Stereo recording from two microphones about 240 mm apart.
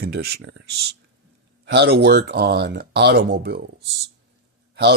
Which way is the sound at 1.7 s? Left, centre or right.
Right.